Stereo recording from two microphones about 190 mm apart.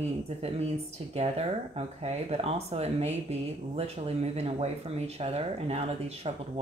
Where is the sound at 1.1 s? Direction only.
35° right (ahead or behind).